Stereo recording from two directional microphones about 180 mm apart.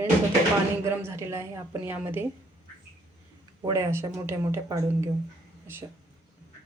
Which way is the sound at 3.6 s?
15° right (ahead or behind).